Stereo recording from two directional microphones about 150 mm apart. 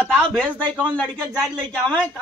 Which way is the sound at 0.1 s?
5° left (ahead or behind).